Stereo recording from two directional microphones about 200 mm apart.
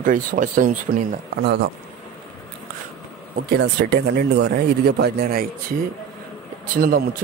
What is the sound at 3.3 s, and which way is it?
Speech, 55° right (ahead or behind).